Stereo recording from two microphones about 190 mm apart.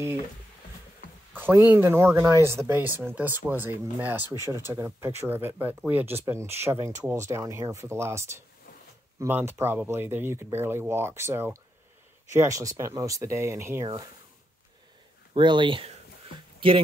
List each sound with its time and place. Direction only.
1.3 s a sound: 10° right (ahead or behind)
1.7 s speech: 10° right (ahead or behind)
15.3 s speech: 25° right (ahead or behind)